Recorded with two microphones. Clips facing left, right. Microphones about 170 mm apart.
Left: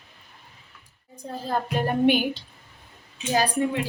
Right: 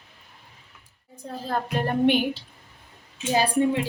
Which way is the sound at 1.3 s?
5° left (ahead or behind).